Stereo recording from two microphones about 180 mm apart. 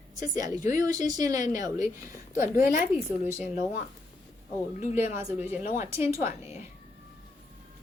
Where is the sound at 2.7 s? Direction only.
40° left (ahead or behind).